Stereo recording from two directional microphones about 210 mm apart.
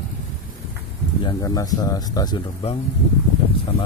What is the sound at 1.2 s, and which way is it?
Speech, 20° left (ahead or behind).